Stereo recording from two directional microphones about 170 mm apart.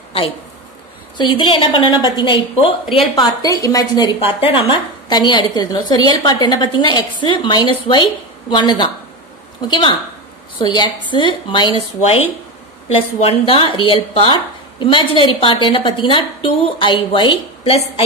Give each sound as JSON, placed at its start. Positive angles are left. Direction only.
{"t": 1.1, "sound": "a woman's voice", "side_deg": 30}
{"t": 4.2, "sound": "a woman's voice", "side_deg": 35}